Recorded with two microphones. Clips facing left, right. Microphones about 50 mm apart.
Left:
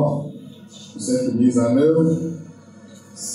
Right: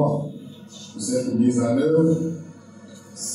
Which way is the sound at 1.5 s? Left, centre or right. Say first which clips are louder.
Left 5 dB; centre.